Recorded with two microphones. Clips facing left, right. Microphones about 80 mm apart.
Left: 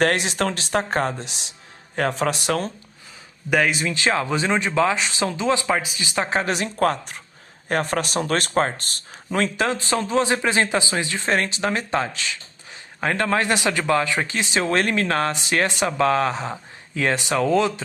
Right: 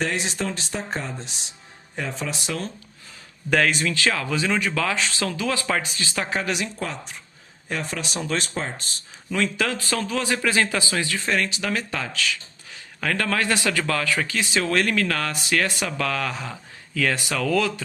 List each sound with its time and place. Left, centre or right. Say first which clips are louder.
0.0 s a man's voice: left 6 dB; left
3.5 s speech: left 1 dB; centre
5.6 s speech: left 2 dB; centre
6.4 s speech: left 3 dB; left
6.7 s speech: left 10 dB; left
9.6 s speech: left 3 dB; left